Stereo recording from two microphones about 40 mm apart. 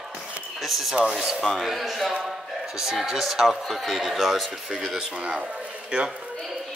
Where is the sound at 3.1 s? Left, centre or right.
Centre.